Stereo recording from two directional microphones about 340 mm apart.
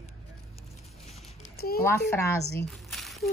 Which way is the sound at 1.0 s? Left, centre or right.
Centre.